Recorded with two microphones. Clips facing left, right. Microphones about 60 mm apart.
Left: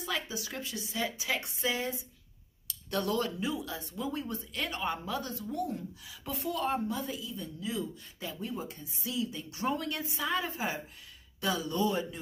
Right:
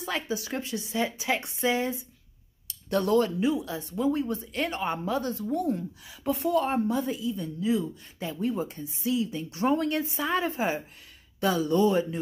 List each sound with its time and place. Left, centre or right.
0.0 s speech: right
3.3 s speech: right